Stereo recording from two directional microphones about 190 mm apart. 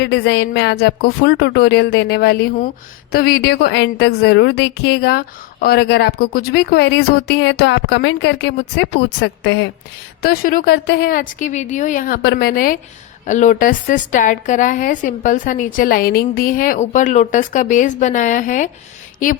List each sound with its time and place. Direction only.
0.0 s a woman's voice: 65° left (ahead or behind)
10.2 s a woman's voice: 50° left (ahead or behind)
12.2 s a woman's voice: 60° left (ahead or behind)